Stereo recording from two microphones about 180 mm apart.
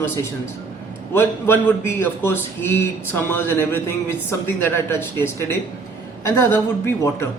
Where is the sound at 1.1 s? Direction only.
10° left (ahead or behind).